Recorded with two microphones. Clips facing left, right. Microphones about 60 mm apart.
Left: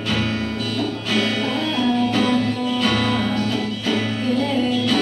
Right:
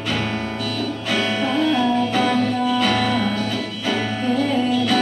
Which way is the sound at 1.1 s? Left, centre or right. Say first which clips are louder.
Right 1 dB; centre.